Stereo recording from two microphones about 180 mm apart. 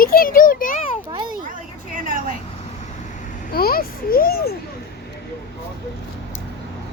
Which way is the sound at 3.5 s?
55° left (ahead or behind).